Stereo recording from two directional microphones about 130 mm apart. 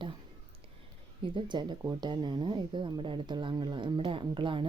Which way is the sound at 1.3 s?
35° right (ahead or behind).